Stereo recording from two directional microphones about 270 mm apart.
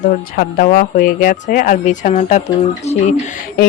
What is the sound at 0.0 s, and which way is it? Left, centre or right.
Speech, left.